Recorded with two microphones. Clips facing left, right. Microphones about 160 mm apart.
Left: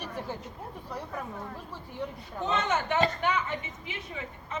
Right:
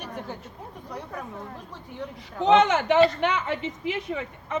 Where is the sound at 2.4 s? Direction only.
85° right.